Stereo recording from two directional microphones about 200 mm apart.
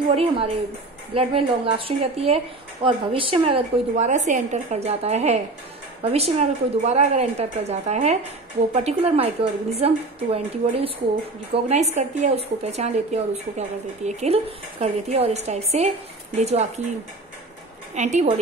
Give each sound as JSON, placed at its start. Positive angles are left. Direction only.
{"t": 0.1, "sound": "speech", "side_deg": -30}
{"t": 17.9, "sound": "speech", "side_deg": -35}